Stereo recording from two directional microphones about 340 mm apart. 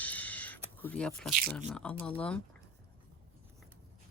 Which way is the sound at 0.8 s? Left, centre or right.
Centre.